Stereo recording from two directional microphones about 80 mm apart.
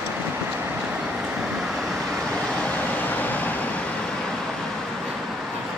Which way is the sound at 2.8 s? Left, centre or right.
Left.